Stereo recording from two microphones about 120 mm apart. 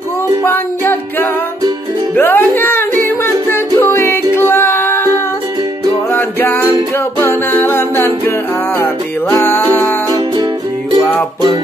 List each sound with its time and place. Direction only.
0.4 s music: 15° left (ahead or behind)
6.1 s music: 15° left (ahead or behind)